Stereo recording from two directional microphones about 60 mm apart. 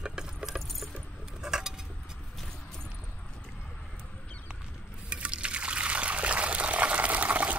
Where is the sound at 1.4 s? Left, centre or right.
Centre.